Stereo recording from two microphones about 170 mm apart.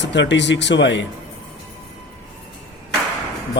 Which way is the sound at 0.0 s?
90° left.